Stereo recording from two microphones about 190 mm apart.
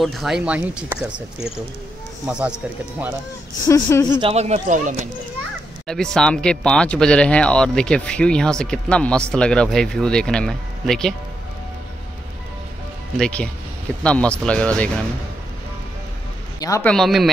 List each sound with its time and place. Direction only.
0.0 s speech: centre (ahead or behind)
2.3 s speech: 5° right (ahead or behind)
3.6 s speech: 15° left (ahead or behind)
4.2 s speech: 35° right (ahead or behind)
5.9 s speech: 5° left (ahead or behind)
13.2 s speech: 5° left (ahead or behind)
16.5 s a man's voice: 20° left (ahead or behind)
16.8 s speech: centre (ahead or behind)